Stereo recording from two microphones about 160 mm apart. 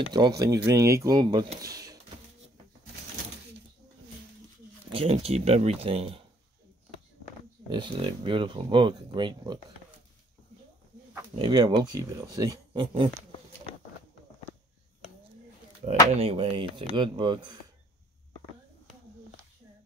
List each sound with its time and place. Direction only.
0.1 s speech: 25° right (ahead or behind)
4.9 s speech: 35° right (ahead or behind)
7.7 s speech: 30° right (ahead or behind)
11.3 s speech: 25° right (ahead or behind)
16.2 s speech: 35° right (ahead or behind)